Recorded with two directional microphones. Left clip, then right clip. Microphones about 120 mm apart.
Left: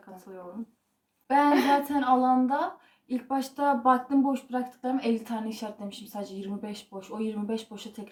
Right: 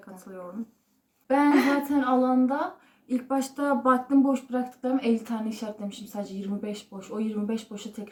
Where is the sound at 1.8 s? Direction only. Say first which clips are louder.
Left 1 dB; 15° right (ahead or behind).